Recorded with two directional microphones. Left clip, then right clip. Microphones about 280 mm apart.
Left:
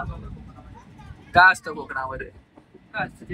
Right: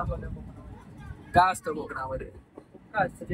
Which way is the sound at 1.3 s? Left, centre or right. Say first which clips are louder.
Left 7 dB; centre.